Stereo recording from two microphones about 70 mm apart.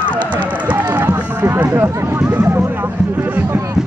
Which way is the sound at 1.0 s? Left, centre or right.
Right.